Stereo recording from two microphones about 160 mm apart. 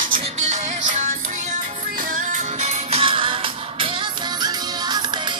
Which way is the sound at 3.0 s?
35° right (ahead or behind).